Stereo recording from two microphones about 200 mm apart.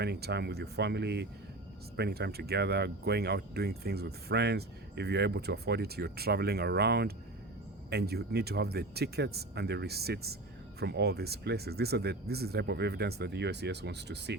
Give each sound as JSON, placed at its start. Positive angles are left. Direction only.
{"t": 0.0, "sound": "speech", "side_deg": -55}